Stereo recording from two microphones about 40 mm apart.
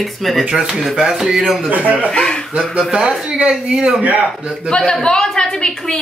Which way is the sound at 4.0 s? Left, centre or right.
Right.